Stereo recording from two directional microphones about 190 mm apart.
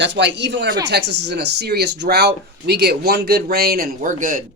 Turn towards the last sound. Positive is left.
turn(degrees=-45)  # may be behind; listen again after turning